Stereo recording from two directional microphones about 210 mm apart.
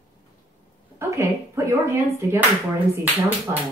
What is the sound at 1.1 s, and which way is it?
A woman's voice, 15° right (ahead or behind).